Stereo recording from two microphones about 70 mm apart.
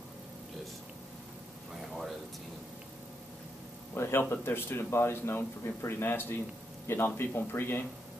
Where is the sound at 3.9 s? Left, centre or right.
Left.